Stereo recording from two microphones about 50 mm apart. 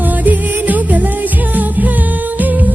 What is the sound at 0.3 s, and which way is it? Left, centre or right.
Music, right.